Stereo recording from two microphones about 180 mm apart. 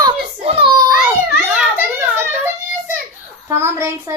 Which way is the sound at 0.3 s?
30° right (ahead or behind).